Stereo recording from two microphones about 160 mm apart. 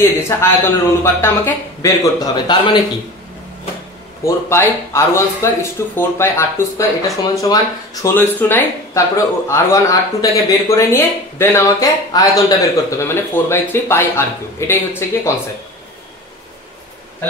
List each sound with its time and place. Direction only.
0.4 s speech: 15° left (ahead or behind)
4.2 s speech: 15° left (ahead or behind)